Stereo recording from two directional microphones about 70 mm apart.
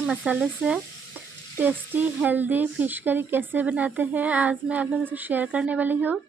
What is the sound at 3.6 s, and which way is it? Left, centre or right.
Speech, centre.